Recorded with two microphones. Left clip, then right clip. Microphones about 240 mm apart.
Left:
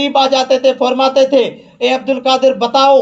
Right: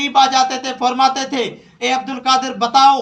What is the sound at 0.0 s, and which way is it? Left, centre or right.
A man's voice, right.